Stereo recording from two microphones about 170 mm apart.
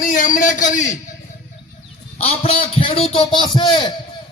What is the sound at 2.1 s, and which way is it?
A man's voice, 35° left (ahead or behind).